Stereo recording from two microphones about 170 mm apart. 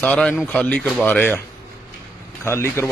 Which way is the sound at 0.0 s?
5° left (ahead or behind).